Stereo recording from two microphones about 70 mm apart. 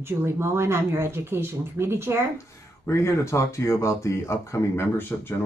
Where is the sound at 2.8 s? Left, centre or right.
Left.